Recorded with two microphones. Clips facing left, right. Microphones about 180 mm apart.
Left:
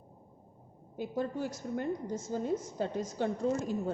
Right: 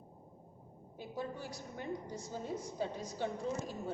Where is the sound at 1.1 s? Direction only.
50° left (ahead or behind).